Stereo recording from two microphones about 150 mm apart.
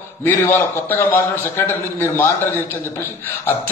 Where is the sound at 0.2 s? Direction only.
15° left (ahead or behind).